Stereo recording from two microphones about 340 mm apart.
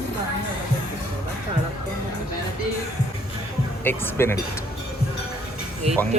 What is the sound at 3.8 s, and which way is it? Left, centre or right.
Speech, centre.